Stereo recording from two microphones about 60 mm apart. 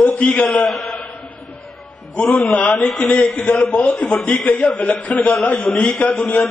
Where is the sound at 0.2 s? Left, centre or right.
Left.